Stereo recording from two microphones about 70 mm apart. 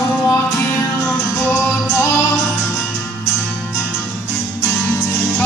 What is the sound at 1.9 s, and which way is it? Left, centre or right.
Music, left.